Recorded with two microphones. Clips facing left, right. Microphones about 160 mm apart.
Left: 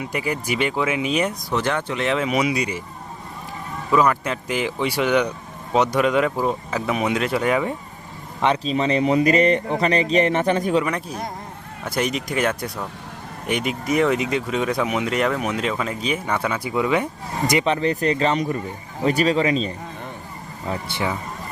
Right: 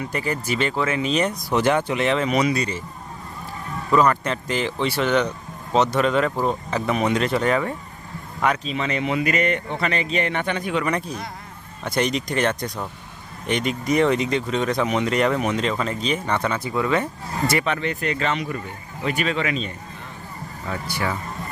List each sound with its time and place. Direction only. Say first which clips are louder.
0.0 s speech: even; 10° left (ahead or behind)
1.5 s speech: right 3 dB; 10° right (ahead or behind)
2.0 s speech: left 1 dB; 5° left (ahead or behind)
3.9 s speech: even; 5° left (ahead or behind)
8.4 s speech: left 3 dB; 30° left (ahead or behind)
10.8 s speech: right 1 dB; centre (ahead or behind); by 17.7 s 15° left (ahead or behind)
17.7 s speech: left 4 dB; 35° left (ahead or behind)